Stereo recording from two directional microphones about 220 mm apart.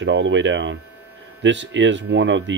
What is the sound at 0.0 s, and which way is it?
Speech, 55° right (ahead or behind).